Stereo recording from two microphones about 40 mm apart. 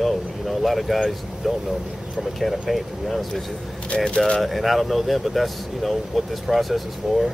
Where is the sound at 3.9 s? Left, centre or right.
Left.